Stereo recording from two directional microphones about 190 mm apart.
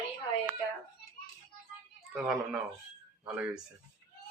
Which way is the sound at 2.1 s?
5° right (ahead or behind).